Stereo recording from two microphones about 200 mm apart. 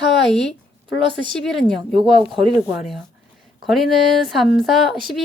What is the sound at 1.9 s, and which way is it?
Speech, 25° right (ahead or behind).